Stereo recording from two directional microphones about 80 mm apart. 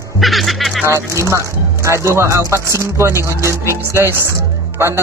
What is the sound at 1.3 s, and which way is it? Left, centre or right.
Speech, right.